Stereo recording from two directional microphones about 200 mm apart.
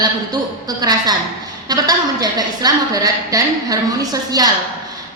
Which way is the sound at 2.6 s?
20° right (ahead or behind).